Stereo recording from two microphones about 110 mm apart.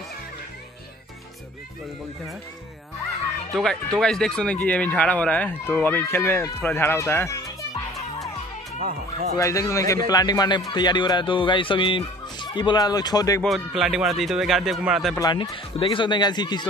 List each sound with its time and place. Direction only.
3.5 s speech: 5° left (ahead or behind); by 7.5 s 30° left (ahead or behind)
9.4 s speech: 30° left (ahead or behind)
13.4 s speech: centre (ahead or behind)
15.1 s speech: 35° left (ahead or behind)